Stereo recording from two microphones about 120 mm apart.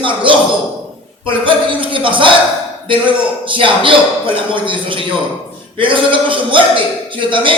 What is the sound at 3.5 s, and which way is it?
A man's voice, 45° right (ahead or behind).